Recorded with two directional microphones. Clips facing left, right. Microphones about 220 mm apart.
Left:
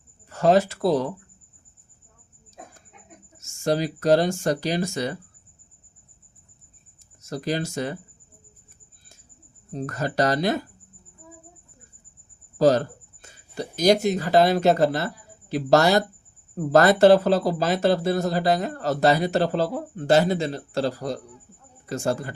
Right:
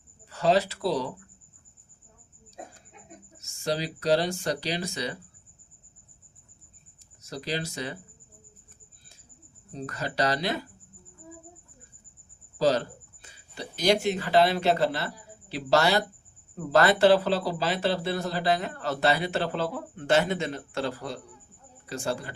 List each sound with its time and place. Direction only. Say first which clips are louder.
0.3 s speech: left 5 dB; 50° left (ahead or behind)
3.3 s speech: left 6 dB; 50° left (ahead or behind)
7.2 s speech: left 6 dB; 50° left (ahead or behind)
9.7 s speech: left 6 dB; 45° left (ahead or behind)
12.5 s speech: left 6 dB; 50° left (ahead or behind)